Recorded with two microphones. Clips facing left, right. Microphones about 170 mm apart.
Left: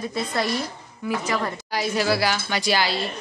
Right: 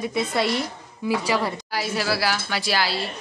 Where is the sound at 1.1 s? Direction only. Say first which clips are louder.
Right 2 dB; 10° right (ahead or behind).